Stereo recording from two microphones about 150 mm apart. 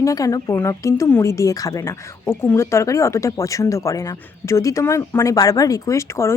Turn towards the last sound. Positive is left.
turn(degrees=20)  # may be behind; listen again after turning